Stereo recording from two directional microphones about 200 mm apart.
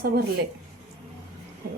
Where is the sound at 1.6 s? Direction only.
50° right (ahead or behind).